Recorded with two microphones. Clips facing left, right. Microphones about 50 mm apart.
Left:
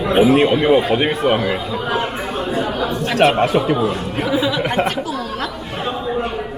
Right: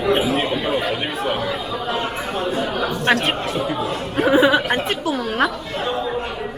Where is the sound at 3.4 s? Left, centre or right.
Left.